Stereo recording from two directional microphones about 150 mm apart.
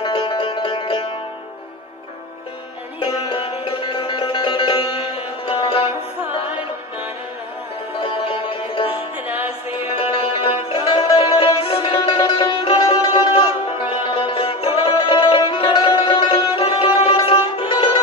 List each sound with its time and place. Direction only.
0.0 s music: 35° left (ahead or behind)
3.0 s music: 35° left (ahead or behind)
8.0 s music: 35° left (ahead or behind)
9.3 s music: 10° right (ahead or behind)
10.1 s music: 35° left (ahead or behind)